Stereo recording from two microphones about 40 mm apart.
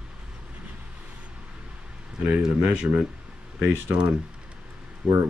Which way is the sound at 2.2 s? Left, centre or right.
Right.